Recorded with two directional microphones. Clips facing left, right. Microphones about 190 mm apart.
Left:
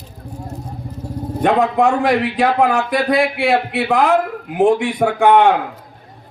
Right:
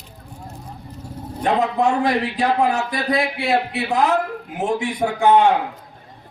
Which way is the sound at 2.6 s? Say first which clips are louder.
Left 4 dB; 60° left (ahead or behind).